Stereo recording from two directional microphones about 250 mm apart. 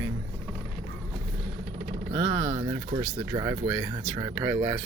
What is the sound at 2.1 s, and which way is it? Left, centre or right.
Speech, centre.